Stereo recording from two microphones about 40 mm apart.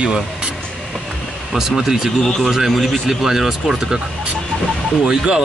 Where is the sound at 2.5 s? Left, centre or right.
Centre.